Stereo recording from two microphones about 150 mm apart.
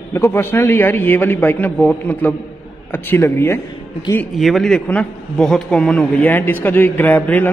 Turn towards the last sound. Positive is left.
turn(degrees=10)  # may be behind; listen again after turning